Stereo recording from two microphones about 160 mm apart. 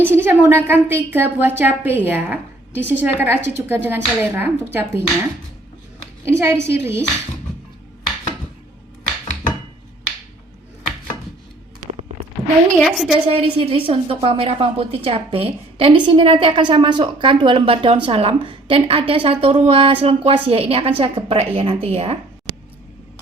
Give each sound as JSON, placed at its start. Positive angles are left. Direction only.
{"t": 0.0, "sound": "a woman's voice", "side_deg": -15}
{"t": 6.2, "sound": "a woman's voice", "side_deg": -15}
{"t": 12.8, "sound": "a woman's voice", "side_deg": 0}
{"t": 13.2, "sound": "a woman's voice", "side_deg": -35}